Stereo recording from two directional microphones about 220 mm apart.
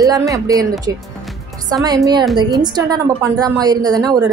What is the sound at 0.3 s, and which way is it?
A woman's voice, 15° right (ahead or behind).